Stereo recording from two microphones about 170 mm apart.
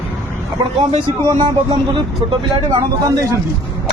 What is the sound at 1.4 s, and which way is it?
Speech, 30° right (ahead or behind).